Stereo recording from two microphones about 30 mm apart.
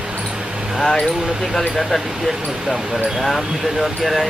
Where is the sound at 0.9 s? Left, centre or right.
Left.